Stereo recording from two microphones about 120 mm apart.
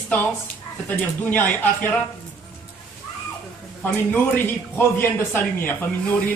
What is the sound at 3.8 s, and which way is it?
Speech, 15° left (ahead or behind).